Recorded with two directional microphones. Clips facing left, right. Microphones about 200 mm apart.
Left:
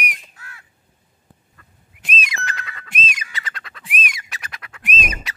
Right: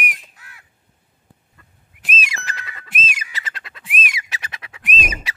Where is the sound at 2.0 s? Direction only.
Centre (ahead or behind).